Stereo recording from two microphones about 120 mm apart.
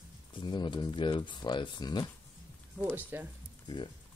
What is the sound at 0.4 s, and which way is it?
Speech, 40° left (ahead or behind).